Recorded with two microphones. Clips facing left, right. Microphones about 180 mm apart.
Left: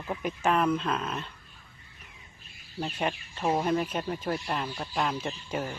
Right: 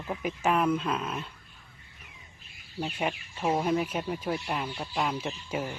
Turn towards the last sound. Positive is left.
turn(degrees=-10)  # may be behind; listen again after turning